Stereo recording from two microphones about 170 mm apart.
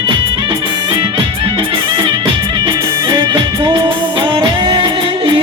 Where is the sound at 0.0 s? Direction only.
30° right (ahead or behind).